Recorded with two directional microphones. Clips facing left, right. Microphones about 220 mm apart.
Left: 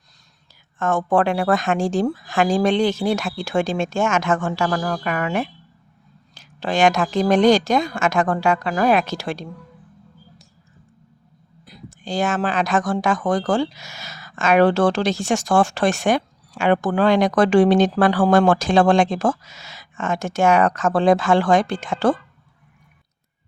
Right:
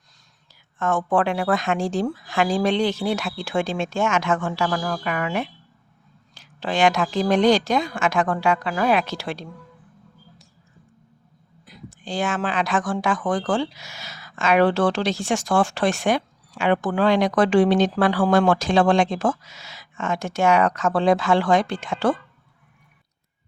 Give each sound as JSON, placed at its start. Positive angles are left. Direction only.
{"t": 0.8, "sound": "speech", "side_deg": 45}
{"t": 11.6, "sound": "speech", "side_deg": 40}